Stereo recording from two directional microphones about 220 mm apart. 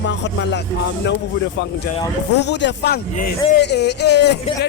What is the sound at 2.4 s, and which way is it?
Speech, 50° left (ahead or behind).